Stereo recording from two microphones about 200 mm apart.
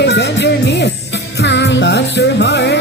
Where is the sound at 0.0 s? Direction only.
60° left (ahead or behind).